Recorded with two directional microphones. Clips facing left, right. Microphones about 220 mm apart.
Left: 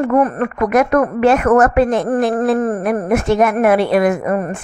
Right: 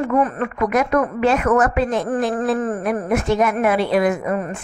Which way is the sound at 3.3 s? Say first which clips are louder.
Left 5 dB; 55° left (ahead or behind).